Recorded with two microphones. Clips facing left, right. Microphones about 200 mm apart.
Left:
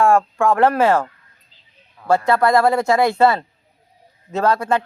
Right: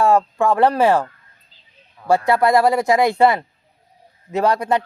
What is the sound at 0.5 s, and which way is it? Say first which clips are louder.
Speech: even; 15° right (ahead or behind).